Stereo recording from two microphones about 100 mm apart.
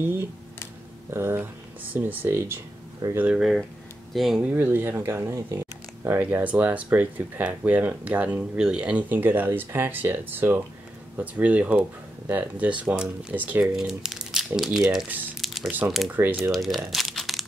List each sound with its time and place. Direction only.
1.1 s speech: 25° right (ahead or behind)
3.2 s speech: 10° right (ahead or behind)
4.1 s speech: centre (ahead or behind)
4.4 s speech: 15° right (ahead or behind)
13.7 s speech: 5° right (ahead or behind)
15.4 s crumpling: 5° right (ahead or behind)
16.1 s speech: 20° right (ahead or behind)
16.5 s speech: centre (ahead or behind)
16.9 s crumpling: centre (ahead or behind)